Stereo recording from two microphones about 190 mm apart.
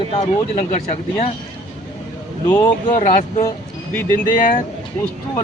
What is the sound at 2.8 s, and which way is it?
Speech, 40° left (ahead or behind).